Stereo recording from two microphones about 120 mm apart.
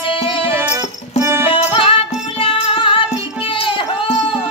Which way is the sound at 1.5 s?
45° left (ahead or behind).